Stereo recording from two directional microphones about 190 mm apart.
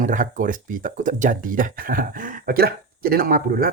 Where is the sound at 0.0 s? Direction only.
45° right (ahead or behind).